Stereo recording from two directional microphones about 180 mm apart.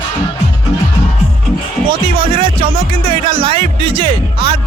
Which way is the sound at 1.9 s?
30° right (ahead or behind).